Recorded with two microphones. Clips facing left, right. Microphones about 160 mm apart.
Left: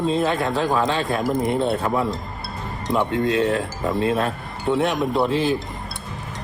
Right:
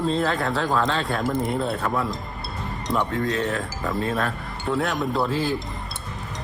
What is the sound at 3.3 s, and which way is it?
A man's voice, 30° left (ahead or behind).